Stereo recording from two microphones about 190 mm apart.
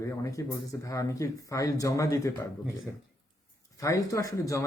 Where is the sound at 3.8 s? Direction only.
15° left (ahead or behind).